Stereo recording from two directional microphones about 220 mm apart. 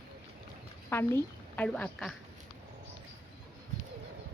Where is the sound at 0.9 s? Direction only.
10° left (ahead or behind).